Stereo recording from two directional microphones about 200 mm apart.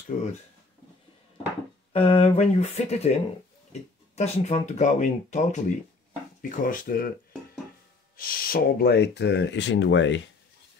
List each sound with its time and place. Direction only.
0.1 s speech: 40° left (ahead or behind)
1.9 s speech: 25° left (ahead or behind)
4.1 s speech: 35° left (ahead or behind)
8.2 s speech: 45° left (ahead or behind); by 10.2 s 65° left (ahead or behind)